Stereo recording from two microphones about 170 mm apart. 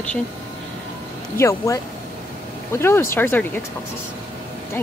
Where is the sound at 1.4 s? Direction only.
15° left (ahead or behind).